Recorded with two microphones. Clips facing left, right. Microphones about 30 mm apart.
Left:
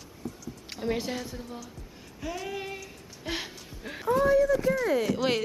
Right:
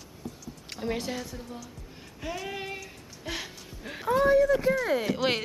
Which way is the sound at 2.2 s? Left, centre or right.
Centre.